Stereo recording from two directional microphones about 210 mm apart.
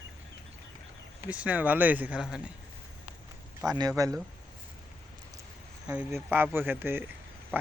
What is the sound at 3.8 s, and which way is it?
Speech, 15° right (ahead or behind).